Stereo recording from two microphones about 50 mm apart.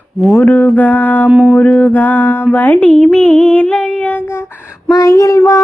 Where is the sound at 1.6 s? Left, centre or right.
Left.